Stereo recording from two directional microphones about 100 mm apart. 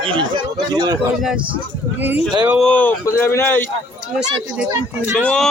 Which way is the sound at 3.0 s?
25° left (ahead or behind).